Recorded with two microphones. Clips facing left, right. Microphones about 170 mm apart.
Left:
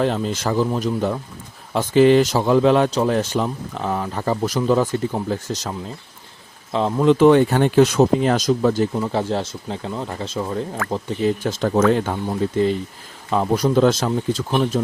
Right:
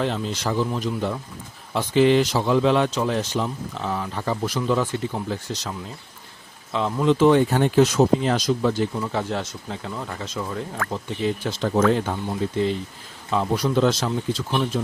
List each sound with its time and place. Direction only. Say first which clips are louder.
0.0 s speech: left 4 dB; 45° left (ahead or behind)
3.2 s speech: left 4 dB; 50° left (ahead or behind)
6.7 s speech: left 4 dB; 35° left (ahead or behind)
7.0 s speech: left 4 dB; 55° left (ahead or behind)
9.0 s speech: left 4 dB; 30° left (ahead or behind)
10.9 s speech: left 5 dB; 45° left (ahead or behind)
13.3 s speech: left 4 dB; 45° left (ahead or behind)